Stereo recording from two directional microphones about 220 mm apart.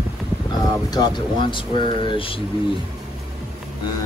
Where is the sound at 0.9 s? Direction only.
20° left (ahead or behind).